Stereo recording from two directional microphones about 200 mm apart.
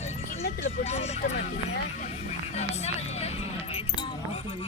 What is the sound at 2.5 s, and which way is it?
Keys jangling, 30° left (ahead or behind).